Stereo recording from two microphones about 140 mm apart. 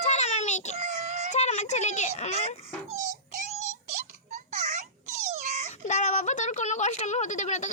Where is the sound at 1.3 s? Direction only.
55° left (ahead or behind).